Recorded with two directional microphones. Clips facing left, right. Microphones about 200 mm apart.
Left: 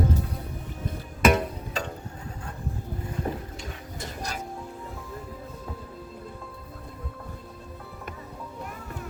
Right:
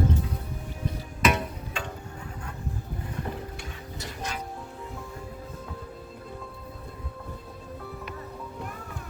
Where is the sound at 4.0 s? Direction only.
40° left (ahead or behind).